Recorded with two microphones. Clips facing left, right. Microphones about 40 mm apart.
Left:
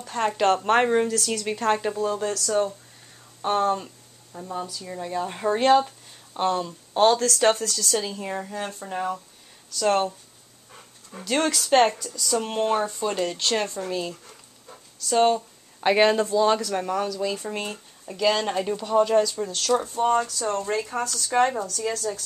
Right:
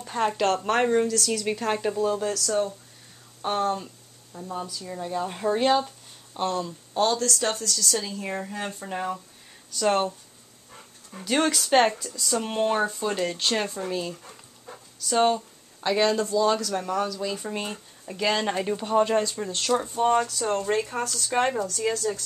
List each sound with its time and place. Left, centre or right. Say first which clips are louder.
0.0 s speech: even; centre
0.4 s speech: left 5 dB; centre
1.3 s speech: left 2 dB; centre
3.7 s a sound: left 3 dB; centre
4.5 s speech: left 1 dB; centre
6.9 s speech: left 5 dB; left
7.7 s speech: left 2 dB; left
8.2 s speech: left 1 dB; centre
11.2 s speech: even; centre
15.8 s speech: left 4 dB; left
16.5 s speech: left 1 dB; centre
18.8 s speech: left 3 dB; right
21.9 s speech: right 1 dB; centre